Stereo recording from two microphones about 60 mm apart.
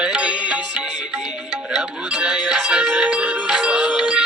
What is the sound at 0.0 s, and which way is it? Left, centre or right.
Music, centre.